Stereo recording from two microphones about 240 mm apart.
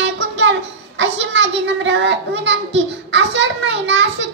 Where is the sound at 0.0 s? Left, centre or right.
Right.